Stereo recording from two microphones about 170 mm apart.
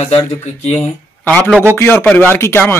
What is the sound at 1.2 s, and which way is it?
A man's voice, 10° left (ahead or behind).